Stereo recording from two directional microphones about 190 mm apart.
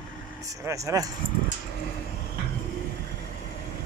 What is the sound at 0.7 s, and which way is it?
Speech, 15° right (ahead or behind).